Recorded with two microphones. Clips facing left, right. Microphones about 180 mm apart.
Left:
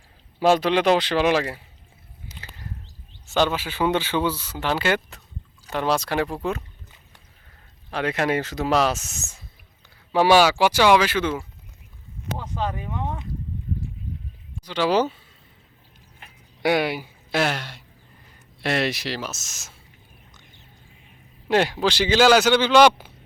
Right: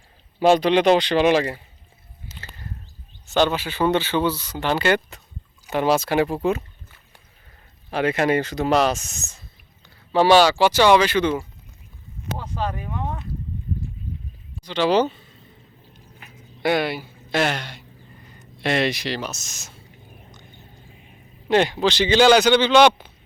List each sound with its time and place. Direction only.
0.3 s a man's voice: 5° left (ahead or behind)
2.2 s a sound: 15° left (ahead or behind)
3.2 s a man's voice: 5° left (ahead or behind)
7.9 s a man's voice: 5° right (ahead or behind)
12.5 s speech: 20° left (ahead or behind)
14.6 s speech: 10° left (ahead or behind)
16.6 s a man's voice: 10° left (ahead or behind)
21.4 s a man's voice: 5° left (ahead or behind)